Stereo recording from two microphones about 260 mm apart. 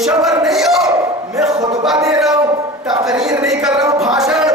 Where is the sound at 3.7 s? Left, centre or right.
Centre.